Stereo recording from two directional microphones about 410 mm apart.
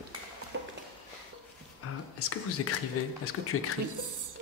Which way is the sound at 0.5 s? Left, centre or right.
Right.